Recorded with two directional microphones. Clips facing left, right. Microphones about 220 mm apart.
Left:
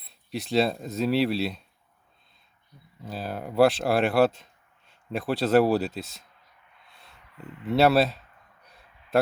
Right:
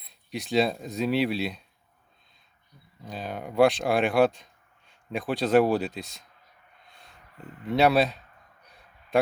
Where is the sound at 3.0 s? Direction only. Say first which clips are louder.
Left 1 dB; 5° left (ahead or behind).